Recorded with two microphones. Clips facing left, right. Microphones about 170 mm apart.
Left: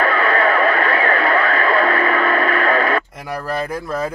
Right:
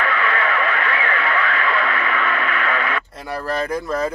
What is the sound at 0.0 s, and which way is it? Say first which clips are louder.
Radio: left 5 dB; 40° left (ahead or behind).